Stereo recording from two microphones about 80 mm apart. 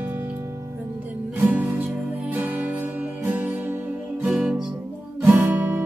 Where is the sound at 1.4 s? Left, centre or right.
Right.